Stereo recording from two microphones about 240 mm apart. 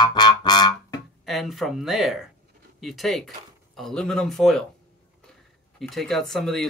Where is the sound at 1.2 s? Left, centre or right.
Centre.